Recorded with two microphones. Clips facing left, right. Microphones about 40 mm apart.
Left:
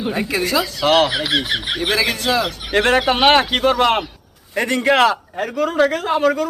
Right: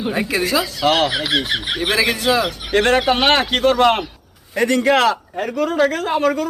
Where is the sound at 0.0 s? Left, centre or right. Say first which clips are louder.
Right 1 dB; centre.